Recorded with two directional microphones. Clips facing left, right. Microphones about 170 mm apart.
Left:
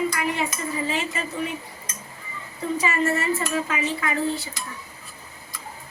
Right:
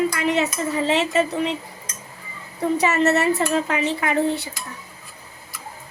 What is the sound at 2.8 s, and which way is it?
A woman's voice, 70° right (ahead or behind).